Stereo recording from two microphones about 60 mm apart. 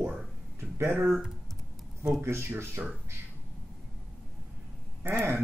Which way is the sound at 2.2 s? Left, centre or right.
Right.